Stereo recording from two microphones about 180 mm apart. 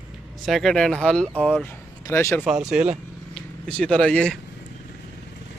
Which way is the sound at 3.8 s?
5° left (ahead or behind).